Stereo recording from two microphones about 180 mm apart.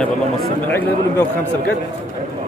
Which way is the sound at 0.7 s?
10° left (ahead or behind).